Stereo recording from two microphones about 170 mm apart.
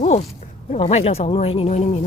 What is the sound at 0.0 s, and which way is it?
Speech, 40° left (ahead or behind).